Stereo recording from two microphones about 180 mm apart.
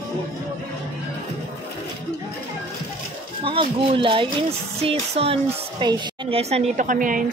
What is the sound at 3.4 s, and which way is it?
Speech, 30° right (ahead or behind).